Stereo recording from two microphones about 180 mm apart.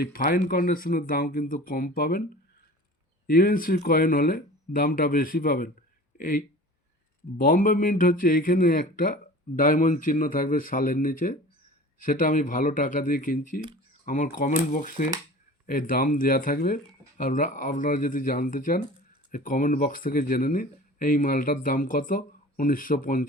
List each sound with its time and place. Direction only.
0.0 s speech: 55° left (ahead or behind)
3.2 s speech: 55° left (ahead or behind)